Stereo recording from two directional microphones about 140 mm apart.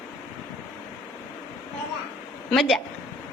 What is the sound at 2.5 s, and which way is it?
Speech, centre (ahead or behind).